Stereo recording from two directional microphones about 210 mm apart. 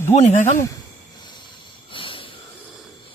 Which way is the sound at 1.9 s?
25° left (ahead or behind).